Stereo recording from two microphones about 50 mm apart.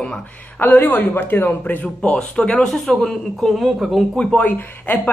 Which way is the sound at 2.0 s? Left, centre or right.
Centre.